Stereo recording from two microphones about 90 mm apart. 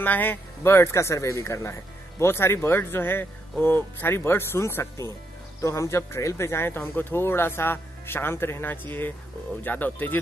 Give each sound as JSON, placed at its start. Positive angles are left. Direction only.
{"t": 0.0, "sound": "speech", "side_deg": 20}